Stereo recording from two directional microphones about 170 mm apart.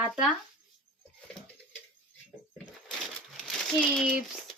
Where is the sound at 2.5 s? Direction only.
5° left (ahead or behind).